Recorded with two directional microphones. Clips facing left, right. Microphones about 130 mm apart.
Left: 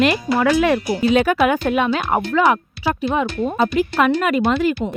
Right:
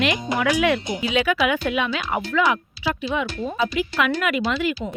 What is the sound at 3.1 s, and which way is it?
Speech, 40° left (ahead or behind).